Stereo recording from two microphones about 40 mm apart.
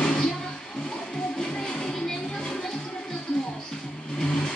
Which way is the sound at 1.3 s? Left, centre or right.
Centre.